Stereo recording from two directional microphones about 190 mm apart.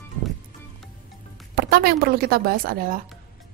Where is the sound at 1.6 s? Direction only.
55° right (ahead or behind).